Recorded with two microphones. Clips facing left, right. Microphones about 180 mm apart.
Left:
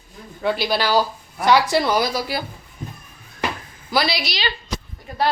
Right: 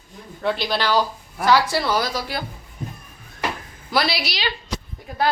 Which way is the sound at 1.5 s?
20° left (ahead or behind).